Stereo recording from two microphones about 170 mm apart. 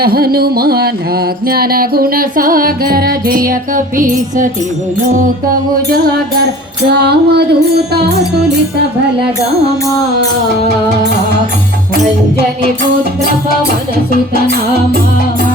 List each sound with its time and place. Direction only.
0.0 s music: 60° right (ahead or behind)
6.8 s music: 70° right (ahead or behind)